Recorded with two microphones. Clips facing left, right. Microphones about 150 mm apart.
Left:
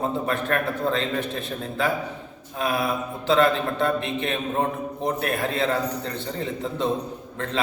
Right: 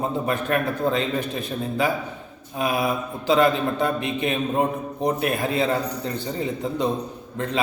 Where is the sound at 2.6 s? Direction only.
20° right (ahead or behind).